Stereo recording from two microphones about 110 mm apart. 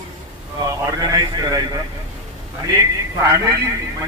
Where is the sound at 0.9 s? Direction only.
35° right (ahead or behind).